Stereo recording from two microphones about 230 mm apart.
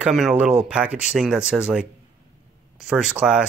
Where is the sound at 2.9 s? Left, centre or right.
Centre.